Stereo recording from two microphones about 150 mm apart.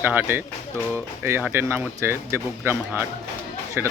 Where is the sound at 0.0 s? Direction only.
10° right (ahead or behind).